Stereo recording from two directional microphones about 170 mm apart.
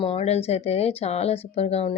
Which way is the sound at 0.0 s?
35° left (ahead or behind).